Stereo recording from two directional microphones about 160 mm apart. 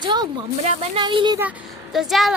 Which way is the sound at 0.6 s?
45° right (ahead or behind).